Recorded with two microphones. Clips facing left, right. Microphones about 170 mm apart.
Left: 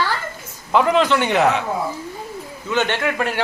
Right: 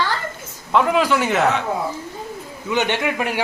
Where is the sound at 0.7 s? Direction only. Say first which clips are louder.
Left 1 dB; centre (ahead or behind).